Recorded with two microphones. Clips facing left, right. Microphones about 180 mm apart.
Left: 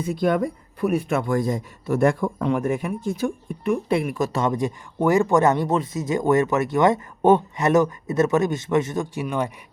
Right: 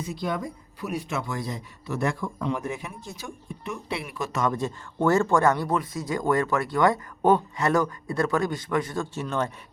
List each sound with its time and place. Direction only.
0.0 s speech: 55° left (ahead or behind)
4.5 s speech: 15° left (ahead or behind)